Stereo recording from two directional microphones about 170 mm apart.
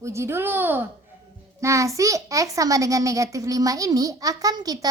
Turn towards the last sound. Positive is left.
turn(degrees=-20)  # may be behind; listen again after turning